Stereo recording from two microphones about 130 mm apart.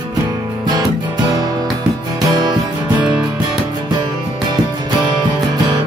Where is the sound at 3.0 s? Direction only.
10° right (ahead or behind).